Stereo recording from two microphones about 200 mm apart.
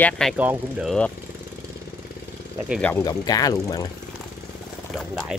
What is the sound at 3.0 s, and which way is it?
Speech, 20° left (ahead or behind).